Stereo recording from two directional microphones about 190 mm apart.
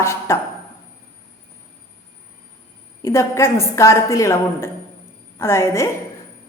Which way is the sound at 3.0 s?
15° left (ahead or behind).